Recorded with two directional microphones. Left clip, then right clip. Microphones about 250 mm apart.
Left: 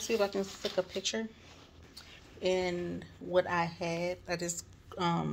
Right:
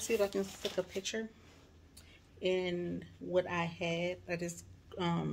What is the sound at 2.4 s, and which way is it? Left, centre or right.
Speech, centre.